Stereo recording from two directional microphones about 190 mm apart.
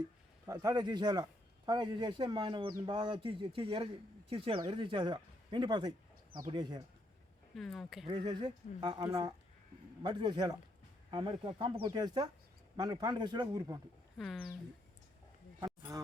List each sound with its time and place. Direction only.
0.4 s a man's voice: 20° right (ahead or behind)
7.5 s speech: centre (ahead or behind)
8.0 s a man's voice: 25° right (ahead or behind)
14.2 s speech: centre (ahead or behind)
15.9 s music: 20° right (ahead or behind)